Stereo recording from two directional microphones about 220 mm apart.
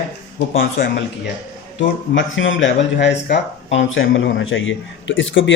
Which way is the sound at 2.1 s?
60° left (ahead or behind).